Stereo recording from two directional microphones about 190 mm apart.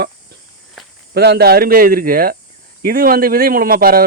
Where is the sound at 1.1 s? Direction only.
60° right (ahead or behind).